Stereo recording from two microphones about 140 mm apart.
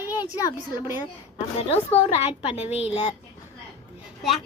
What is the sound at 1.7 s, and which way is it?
A woman's voice, 50° left (ahead or behind).